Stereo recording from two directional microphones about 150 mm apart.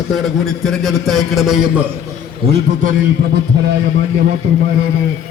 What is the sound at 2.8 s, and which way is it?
Speech, 65° right (ahead or behind).